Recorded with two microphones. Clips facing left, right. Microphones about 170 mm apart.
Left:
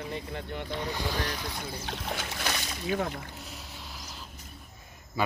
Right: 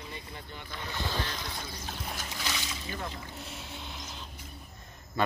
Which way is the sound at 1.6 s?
70° left (ahead or behind).